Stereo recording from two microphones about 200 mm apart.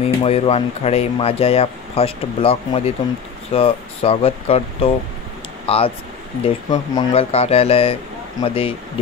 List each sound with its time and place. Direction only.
0.0 s speech: 30° left (ahead or behind)